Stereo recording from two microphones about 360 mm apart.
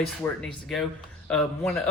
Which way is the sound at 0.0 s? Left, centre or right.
Centre.